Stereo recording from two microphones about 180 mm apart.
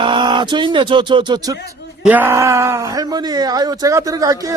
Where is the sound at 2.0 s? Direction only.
10° right (ahead or behind).